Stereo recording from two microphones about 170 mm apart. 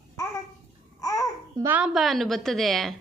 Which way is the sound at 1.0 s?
20° left (ahead or behind).